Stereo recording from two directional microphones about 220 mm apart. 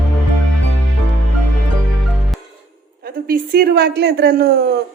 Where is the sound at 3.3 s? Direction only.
45° right (ahead or behind).